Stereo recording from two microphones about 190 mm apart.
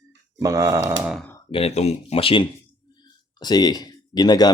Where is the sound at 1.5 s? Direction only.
35° left (ahead or behind).